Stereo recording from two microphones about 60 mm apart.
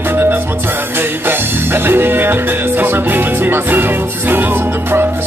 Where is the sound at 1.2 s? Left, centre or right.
Right.